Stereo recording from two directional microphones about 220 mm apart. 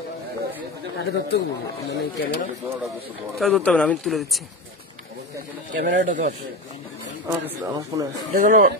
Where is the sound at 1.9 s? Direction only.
40° left (ahead or behind).